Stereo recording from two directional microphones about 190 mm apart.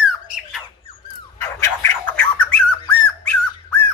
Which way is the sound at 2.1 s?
5° left (ahead or behind).